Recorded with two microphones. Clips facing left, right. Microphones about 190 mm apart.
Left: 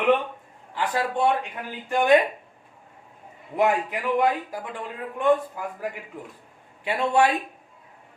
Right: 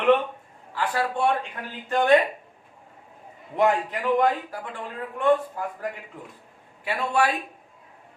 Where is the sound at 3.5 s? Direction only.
10° left (ahead or behind).